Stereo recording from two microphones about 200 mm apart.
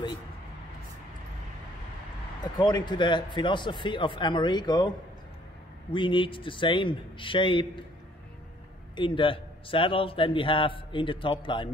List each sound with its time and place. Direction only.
2.6 s a man's voice: 20° left (ahead or behind)
8.9 s a man's voice: 25° left (ahead or behind)